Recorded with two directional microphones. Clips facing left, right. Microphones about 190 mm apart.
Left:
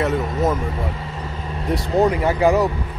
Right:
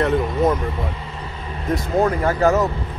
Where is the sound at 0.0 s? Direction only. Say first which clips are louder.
Right 2 dB; 5° left (ahead or behind).